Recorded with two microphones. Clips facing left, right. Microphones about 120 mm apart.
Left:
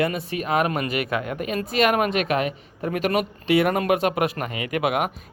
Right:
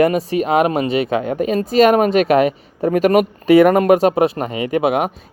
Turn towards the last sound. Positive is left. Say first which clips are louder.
# right 7 dB
turn(degrees=-30)  # may be behind; listen again after turning